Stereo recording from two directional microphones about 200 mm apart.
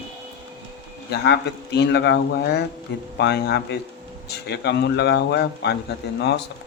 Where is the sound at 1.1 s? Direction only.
55° left (ahead or behind).